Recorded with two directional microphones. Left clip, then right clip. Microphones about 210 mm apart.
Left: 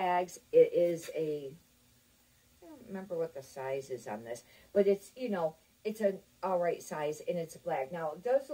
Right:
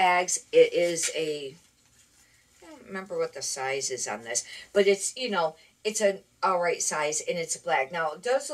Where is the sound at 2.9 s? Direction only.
10° right (ahead or behind).